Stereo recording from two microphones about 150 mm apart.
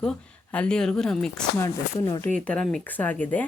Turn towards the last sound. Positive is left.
turn(degrees=10)  # may be behind; listen again after turning